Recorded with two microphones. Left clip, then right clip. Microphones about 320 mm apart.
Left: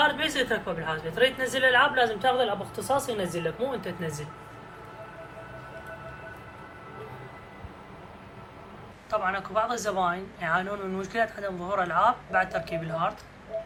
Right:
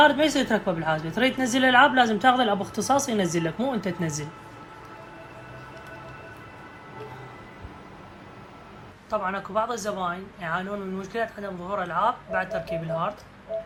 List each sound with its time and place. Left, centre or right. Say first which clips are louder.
0.0 s a woman's voice: right 5 dB; centre
9.0 s speech: even; centre